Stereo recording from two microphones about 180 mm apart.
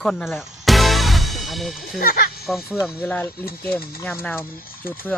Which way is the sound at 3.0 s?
5° left (ahead or behind).